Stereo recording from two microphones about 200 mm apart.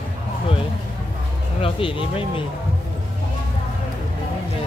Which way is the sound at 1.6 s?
25° left (ahead or behind).